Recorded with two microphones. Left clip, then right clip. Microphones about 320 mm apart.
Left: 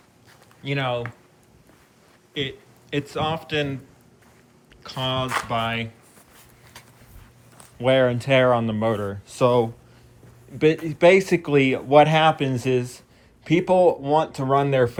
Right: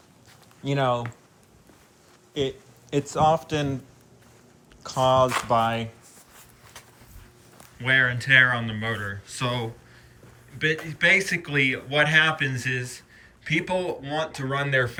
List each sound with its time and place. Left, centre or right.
0.6 s speech: centre
2.3 s a man's voice: centre
4.8 s speech: centre
8.1 s speech: centre
10.8 s speech: centre